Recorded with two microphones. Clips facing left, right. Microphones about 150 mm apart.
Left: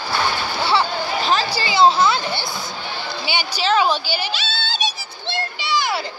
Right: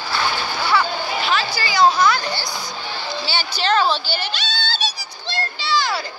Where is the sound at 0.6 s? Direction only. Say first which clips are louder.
Left 1 dB; 30° left (ahead or behind).